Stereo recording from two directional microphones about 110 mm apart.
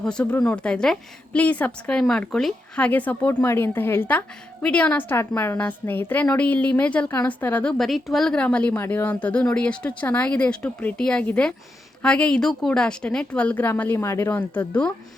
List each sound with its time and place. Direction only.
0.0 s a woman's voice: 10° left (ahead or behind)